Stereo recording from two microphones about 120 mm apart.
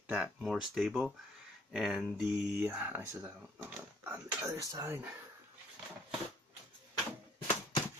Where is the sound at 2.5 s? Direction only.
15° right (ahead or behind).